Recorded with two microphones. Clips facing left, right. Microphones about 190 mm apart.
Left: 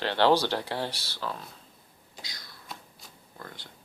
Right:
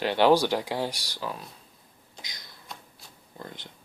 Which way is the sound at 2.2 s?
20° right (ahead or behind).